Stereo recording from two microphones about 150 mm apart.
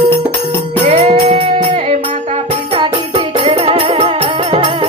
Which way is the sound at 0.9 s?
40° right (ahead or behind).